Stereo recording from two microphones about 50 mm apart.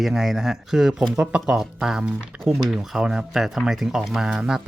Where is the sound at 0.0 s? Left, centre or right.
Centre.